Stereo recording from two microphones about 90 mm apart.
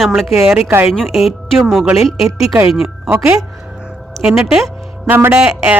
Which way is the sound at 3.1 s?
30° right (ahead or behind).